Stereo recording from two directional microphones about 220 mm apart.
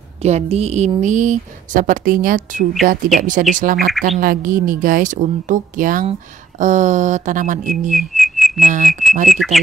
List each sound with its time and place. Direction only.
0.2 s a woman's voice: 30° right (ahead or behind)
7.9 s whistling: centre (ahead or behind)
8.5 s a woman's voice: 35° right (ahead or behind)
9.3 s speech: centre (ahead or behind)